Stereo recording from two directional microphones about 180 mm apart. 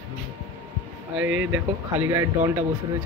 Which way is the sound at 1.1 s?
10° right (ahead or behind).